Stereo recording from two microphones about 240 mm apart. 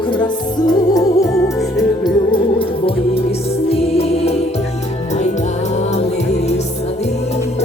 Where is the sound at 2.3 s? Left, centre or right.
Left.